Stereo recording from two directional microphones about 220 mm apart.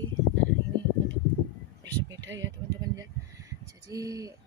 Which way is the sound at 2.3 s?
55° right (ahead or behind).